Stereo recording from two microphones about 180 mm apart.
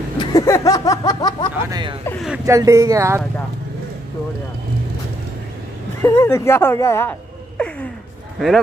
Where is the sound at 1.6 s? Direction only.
20° right (ahead or behind).